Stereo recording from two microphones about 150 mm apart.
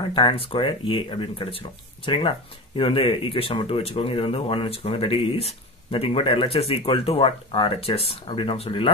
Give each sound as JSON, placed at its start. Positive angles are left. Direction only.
{"t": 0.1, "sound": "speech", "side_deg": 35}